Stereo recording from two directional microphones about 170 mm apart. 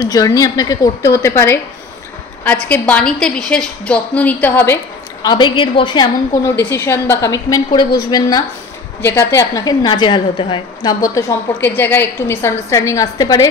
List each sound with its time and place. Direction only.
0.0 s a woman's voice: 20° left (ahead or behind)
5.2 s a woman's voice: 25° left (ahead or behind)
6.6 s a woman's voice: 15° left (ahead or behind)